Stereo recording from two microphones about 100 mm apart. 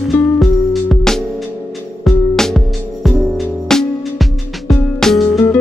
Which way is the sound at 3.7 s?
Centre (ahead or behind).